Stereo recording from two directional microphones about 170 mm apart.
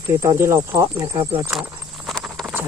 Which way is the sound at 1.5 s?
Centre (ahead or behind).